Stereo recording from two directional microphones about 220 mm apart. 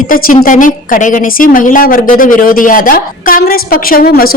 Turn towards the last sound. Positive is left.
turn(degrees=40)  # may be behind; listen again after turning